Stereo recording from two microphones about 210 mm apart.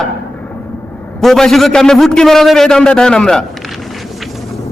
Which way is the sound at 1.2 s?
Centre (ahead or behind).